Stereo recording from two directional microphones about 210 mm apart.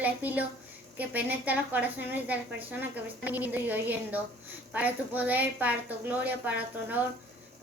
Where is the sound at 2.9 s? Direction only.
10° right (ahead or behind).